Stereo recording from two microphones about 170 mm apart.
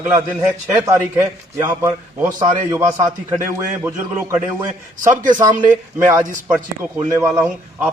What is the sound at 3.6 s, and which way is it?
A man's voice, 15° right (ahead or behind).